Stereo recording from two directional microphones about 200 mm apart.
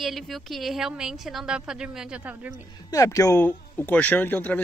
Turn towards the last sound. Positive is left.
turn(degrees=10)  # may be behind; listen again after turning